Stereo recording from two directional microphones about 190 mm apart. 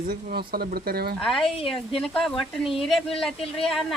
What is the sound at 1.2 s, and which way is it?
Speech, centre (ahead or behind).